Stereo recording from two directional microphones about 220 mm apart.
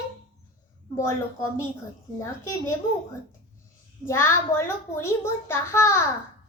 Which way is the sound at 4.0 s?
10° left (ahead or behind).